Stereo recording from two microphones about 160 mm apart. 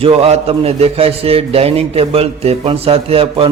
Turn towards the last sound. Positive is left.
turn(degrees=-35)  # may be behind; listen again after turning